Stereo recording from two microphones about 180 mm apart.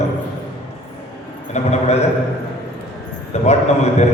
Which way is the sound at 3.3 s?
40° left (ahead or behind).